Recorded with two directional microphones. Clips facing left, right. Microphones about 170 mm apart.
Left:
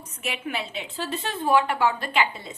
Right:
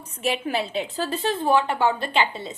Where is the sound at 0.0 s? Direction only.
35° right (ahead or behind).